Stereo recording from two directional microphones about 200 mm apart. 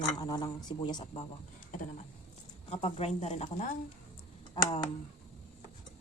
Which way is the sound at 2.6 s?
30° left (ahead or behind).